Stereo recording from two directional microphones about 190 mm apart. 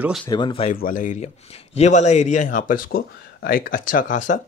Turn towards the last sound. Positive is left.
turn(degrees=40)  # may be behind; listen again after turning